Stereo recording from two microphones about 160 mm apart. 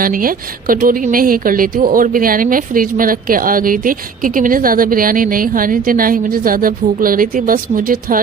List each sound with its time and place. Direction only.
0.0 s speech: 60° right (ahead or behind)